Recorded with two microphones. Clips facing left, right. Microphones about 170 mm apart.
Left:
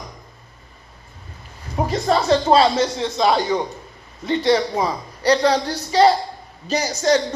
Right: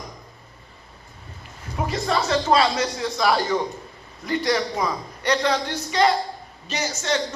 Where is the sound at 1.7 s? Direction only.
35° left (ahead or behind).